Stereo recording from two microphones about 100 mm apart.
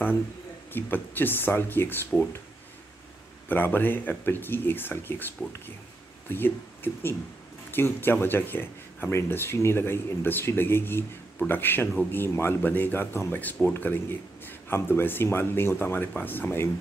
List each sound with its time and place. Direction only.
0.7 s speech: 20° left (ahead or behind)
3.4 s speech: 20° left (ahead or behind)